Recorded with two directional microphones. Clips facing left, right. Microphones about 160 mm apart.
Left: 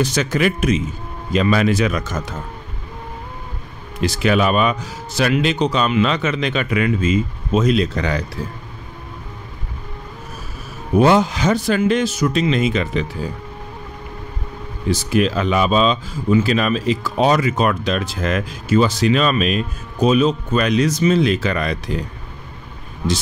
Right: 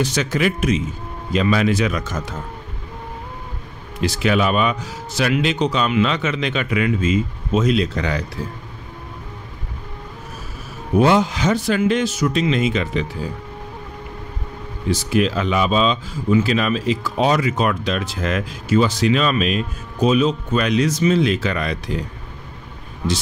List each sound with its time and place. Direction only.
0.0 s speech: 45° left (ahead or behind)
4.0 s speech: 45° left (ahead or behind)
11.0 s speech: 45° left (ahead or behind)
14.9 s speech: 45° left (ahead or behind)